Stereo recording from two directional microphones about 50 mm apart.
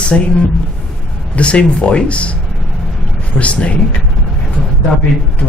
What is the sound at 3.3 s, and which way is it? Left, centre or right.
Speech, left.